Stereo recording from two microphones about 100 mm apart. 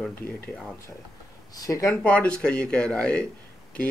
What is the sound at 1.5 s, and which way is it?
Speech, 35° left (ahead or behind).